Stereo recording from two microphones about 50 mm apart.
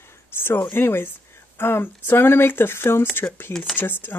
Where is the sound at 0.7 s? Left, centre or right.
Left.